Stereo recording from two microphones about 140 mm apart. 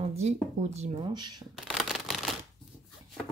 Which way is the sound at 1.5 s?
Centre (ahead or behind).